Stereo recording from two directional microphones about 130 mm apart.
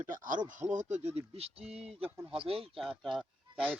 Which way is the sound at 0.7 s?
65° right (ahead or behind).